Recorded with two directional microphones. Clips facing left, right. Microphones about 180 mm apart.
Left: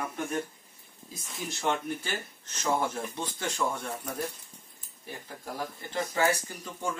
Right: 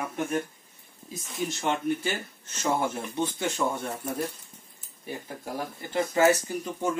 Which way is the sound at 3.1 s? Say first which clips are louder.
Right 7 dB; 25° right (ahead or behind).